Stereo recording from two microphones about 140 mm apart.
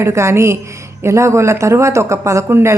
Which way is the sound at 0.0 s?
20° right (ahead or behind).